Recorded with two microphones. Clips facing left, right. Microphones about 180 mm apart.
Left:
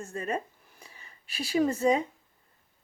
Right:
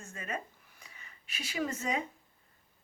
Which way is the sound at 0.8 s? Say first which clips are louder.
Left 3 dB; 35° left (ahead or behind).